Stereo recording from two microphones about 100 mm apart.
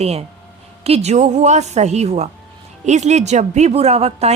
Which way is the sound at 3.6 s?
90° right.